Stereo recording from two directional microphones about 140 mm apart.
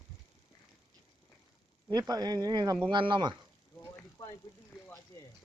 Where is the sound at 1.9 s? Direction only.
30° right (ahead or behind).